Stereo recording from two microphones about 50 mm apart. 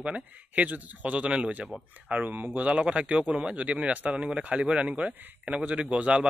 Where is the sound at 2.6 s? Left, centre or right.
Right.